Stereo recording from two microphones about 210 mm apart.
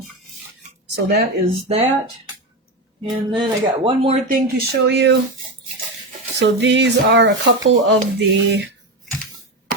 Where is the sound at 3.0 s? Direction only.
20° right (ahead or behind).